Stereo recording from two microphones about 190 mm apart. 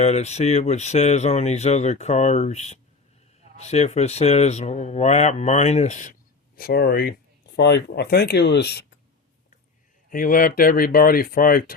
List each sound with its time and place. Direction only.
0.0 s speech: 35° left (ahead or behind)
6.6 s speech: 50° left (ahead or behind)
10.1 s speech: 45° left (ahead or behind)